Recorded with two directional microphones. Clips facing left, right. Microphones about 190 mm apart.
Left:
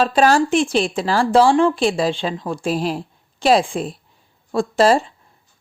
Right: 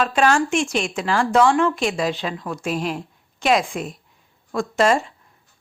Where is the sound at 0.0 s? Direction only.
35° left (ahead or behind).